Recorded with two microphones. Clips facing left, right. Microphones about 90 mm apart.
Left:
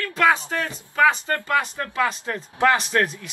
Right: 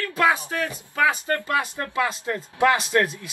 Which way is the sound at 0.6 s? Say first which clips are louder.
Left 3 dB; 25° left (ahead or behind).